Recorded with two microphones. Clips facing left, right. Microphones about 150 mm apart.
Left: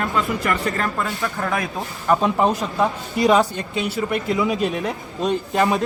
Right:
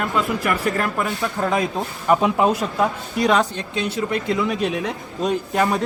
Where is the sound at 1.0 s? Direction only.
15° right (ahead or behind).